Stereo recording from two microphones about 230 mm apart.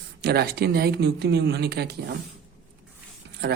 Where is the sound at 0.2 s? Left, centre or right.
Right.